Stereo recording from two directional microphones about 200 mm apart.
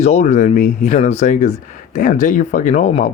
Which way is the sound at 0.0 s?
35° left (ahead or behind).